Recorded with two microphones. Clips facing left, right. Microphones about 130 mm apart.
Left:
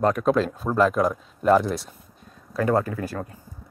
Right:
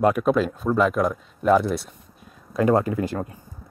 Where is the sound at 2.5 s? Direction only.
20° right (ahead or behind).